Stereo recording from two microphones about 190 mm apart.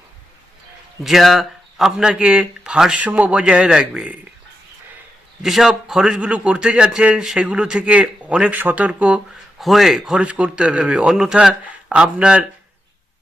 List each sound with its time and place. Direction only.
1.0 s a man's voice: centre (ahead or behind)
5.4 s a man's voice: centre (ahead or behind)